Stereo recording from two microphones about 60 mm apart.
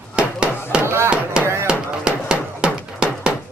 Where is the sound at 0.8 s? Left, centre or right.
Right.